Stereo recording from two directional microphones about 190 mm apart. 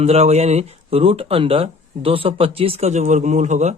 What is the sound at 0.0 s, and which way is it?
A man's voice, 35° right (ahead or behind).